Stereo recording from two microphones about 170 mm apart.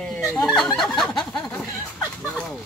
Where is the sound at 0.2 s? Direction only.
15° left (ahead or behind).